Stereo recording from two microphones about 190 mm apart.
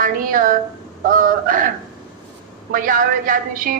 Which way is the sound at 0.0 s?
45° right (ahead or behind).